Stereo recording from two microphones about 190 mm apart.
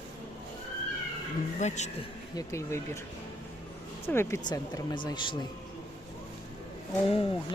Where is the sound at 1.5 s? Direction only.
35° left (ahead or behind).